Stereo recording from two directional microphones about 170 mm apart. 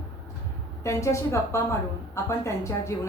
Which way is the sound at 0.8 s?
15° left (ahead or behind).